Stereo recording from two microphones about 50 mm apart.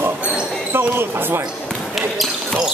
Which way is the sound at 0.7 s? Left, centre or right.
Right.